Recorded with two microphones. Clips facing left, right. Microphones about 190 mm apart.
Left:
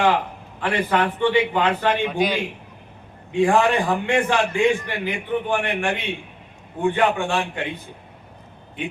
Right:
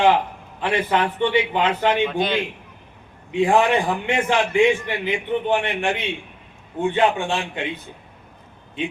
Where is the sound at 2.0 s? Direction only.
10° left (ahead or behind).